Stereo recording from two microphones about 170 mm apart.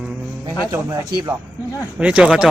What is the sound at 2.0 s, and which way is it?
Speech, 5° right (ahead or behind).